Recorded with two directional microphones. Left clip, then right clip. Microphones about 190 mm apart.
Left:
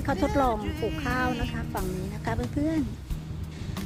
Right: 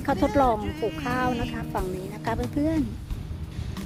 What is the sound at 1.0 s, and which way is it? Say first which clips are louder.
Speech: right 1 dB; 35° right (ahead or behind).